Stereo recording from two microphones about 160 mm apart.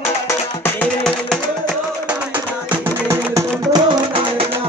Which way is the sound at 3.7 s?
35° right (ahead or behind).